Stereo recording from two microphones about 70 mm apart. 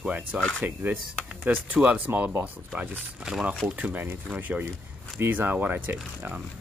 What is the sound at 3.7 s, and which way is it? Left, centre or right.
Speech, right.